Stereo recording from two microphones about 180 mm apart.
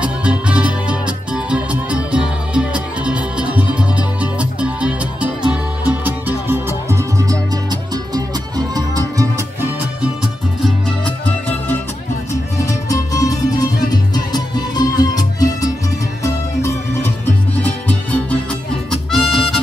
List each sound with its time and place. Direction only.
0.0 s music: 5° right (ahead or behind)
12.5 s music: 20° left (ahead or behind)
17.6 s music: 10° left (ahead or behind)